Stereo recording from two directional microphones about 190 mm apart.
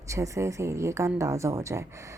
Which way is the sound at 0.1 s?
15° right (ahead or behind).